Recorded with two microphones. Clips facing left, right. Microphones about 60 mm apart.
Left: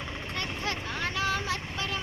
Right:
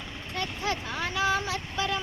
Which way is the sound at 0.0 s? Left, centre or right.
Left.